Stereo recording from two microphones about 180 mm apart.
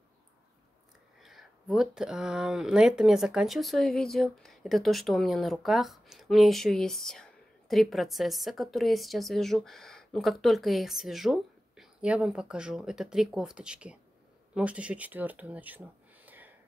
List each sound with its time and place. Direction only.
1.2 s speech: centre (ahead or behind)